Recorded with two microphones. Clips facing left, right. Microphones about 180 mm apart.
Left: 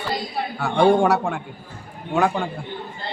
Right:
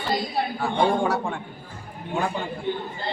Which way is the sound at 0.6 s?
75° left (ahead or behind).